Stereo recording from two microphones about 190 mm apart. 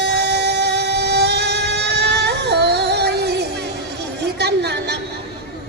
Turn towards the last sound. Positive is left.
turn(degrees=-60)  # may be behind; listen again after turning